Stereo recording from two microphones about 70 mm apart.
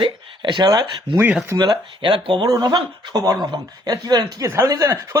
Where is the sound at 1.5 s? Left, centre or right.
Right.